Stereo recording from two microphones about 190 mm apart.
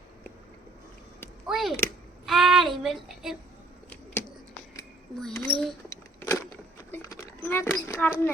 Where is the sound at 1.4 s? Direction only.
Centre (ahead or behind).